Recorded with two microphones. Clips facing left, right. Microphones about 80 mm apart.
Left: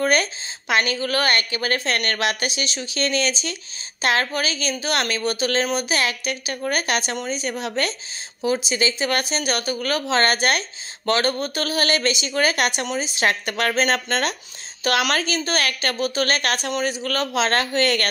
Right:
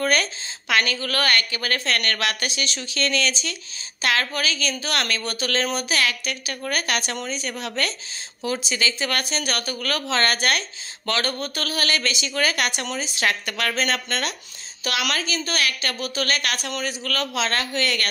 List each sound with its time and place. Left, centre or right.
0.0 s a woman's voice: left